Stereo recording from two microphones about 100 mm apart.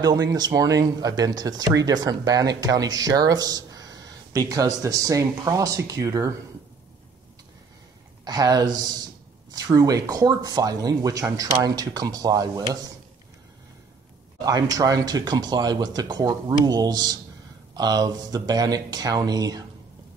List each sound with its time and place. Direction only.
0.0 s speech: 40° right (ahead or behind)
8.3 s speech: 40° right (ahead or behind)
14.4 s speech: 35° right (ahead or behind)